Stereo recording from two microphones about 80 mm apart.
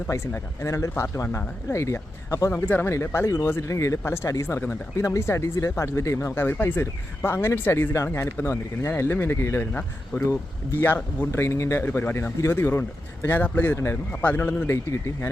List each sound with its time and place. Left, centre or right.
0.3 s speech: left
2.6 s speech: left
11.9 s speech: left
12.1 s speech: left